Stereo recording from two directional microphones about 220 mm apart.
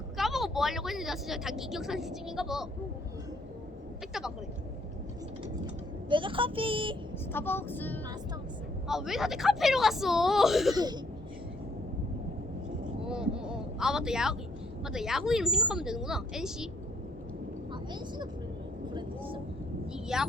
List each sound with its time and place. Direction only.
0.2 s speech: centre (ahead or behind)
6.1 s speech: 20° right (ahead or behind)
7.3 s vehicle: 10° left (ahead or behind)
8.9 s a woman's voice: centre (ahead or behind)
10.8 s speech: 20° right (ahead or behind)
13.1 s a sound: 5° right (ahead or behind)
14.8 s a woman's voice: centre (ahead or behind)
19.9 s speech: 5° right (ahead or behind)